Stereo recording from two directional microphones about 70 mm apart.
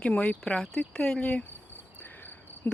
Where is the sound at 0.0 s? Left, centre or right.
Centre.